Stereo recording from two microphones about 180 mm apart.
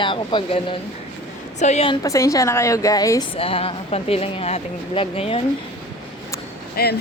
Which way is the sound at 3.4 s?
30° left (ahead or behind).